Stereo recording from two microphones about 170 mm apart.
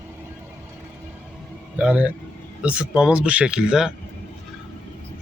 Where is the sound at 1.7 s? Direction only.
5° right (ahead or behind).